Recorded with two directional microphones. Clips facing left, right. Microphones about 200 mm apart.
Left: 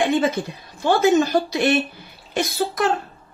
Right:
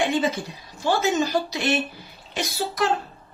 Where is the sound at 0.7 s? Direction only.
55° left (ahead or behind).